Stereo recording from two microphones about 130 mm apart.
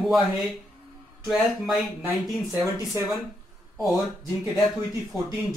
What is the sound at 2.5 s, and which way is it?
Speech, 30° right (ahead or behind).